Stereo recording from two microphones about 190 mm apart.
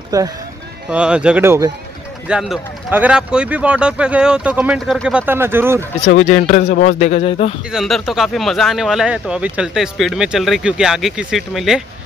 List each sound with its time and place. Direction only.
0.1 s speech: 20° right (ahead or behind)
0.8 s speech: 5° right (ahead or behind)
2.2 s speech: 5° right (ahead or behind)
6.2 s speech: 40° left (ahead or behind)
7.7 s speech: centre (ahead or behind)